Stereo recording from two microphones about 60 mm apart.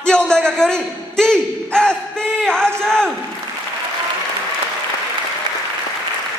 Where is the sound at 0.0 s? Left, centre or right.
Centre.